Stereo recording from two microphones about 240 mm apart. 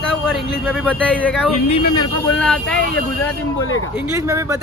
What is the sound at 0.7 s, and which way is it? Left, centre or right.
Speech, centre.